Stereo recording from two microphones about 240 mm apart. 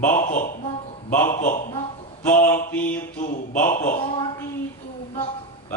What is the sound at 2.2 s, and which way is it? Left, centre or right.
Mantra, centre.